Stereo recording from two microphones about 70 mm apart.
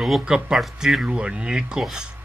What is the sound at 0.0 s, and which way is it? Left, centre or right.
Speech, centre.